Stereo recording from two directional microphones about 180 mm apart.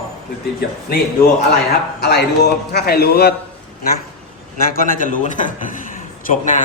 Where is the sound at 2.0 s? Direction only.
65° left (ahead or behind).